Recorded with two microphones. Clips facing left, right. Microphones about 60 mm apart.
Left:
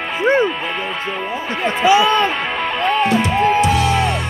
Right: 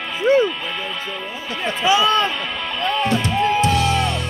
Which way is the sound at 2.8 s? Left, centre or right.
Left.